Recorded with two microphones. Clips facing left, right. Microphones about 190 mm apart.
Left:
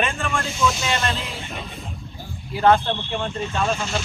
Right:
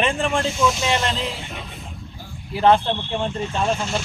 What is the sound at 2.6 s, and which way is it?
Speech, 25° right (ahead or behind).